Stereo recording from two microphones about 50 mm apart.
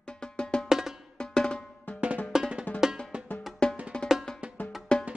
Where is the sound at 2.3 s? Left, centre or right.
Centre.